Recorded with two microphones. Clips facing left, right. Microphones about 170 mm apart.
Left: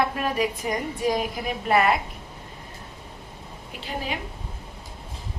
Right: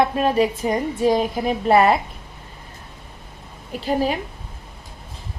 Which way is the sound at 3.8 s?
40° right (ahead or behind).